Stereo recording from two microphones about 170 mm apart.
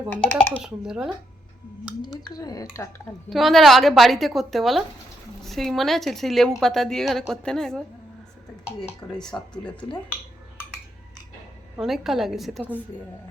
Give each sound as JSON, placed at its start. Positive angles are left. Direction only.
{"t": 0.3, "sound": "speech", "side_deg": 5}
{"t": 0.6, "sound": "a woman's voice", "side_deg": -5}
{"t": 2.3, "sound": "speech", "side_deg": 20}
{"t": 3.2, "sound": "a woman's voice", "side_deg": 0}
{"t": 8.9, "sound": "a woman's voice", "side_deg": 5}
{"t": 11.8, "sound": "a woman's voice", "side_deg": 0}